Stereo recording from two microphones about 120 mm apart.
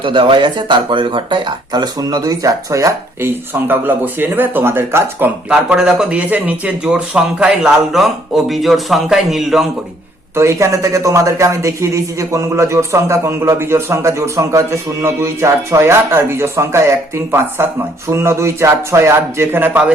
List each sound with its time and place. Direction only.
0.0 s speech: 45° right (ahead or behind); by 5.3 s 20° right (ahead or behind)
5.5 s speech: 5° right (ahead or behind)
10.3 s speech: 25° right (ahead or behind)